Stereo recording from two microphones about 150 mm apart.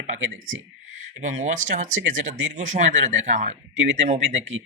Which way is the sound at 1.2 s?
55° right (ahead or behind).